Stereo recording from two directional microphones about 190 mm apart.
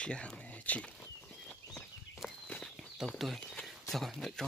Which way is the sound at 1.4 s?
Centre (ahead or behind).